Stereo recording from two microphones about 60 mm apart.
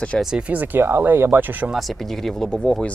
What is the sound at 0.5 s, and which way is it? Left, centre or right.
Speech, right.